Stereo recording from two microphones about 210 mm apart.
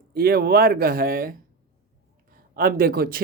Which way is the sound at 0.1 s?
45° right (ahead or behind).